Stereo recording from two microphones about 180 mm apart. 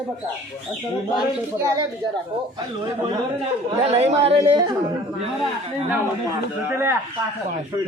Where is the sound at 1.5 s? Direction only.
15° right (ahead or behind).